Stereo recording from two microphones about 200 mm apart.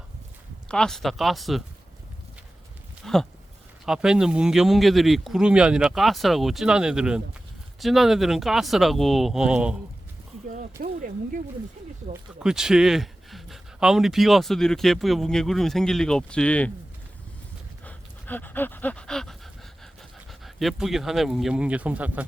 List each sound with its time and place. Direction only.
0.7 s speech: 5° left (ahead or behind)
3.0 s a sound: centre (ahead or behind)
3.8 s speech: 5° right (ahead or behind)
10.5 s speech: 40° right (ahead or behind)
12.4 s speech: 5° right (ahead or behind)
17.8 s pant: 10° left (ahead or behind)
20.4 s speech: centre (ahead or behind)